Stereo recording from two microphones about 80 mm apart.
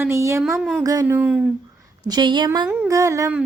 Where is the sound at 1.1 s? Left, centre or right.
Centre.